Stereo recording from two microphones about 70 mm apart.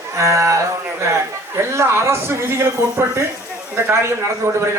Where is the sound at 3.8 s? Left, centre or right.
Right.